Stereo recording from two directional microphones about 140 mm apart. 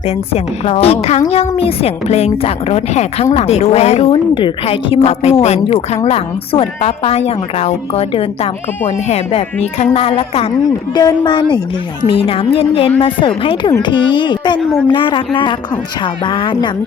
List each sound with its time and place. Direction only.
0.3 s a woman's voice: 45° left (ahead or behind)
10.9 s a woman's voice: 30° left (ahead or behind)